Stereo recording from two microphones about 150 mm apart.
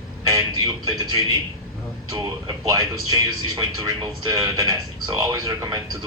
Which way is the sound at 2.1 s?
25° right (ahead or behind).